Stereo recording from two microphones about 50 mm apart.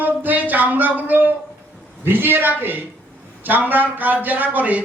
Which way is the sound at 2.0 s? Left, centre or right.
Right.